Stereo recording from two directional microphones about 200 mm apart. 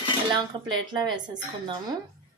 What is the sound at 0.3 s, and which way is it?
A woman's voice, 20° right (ahead or behind).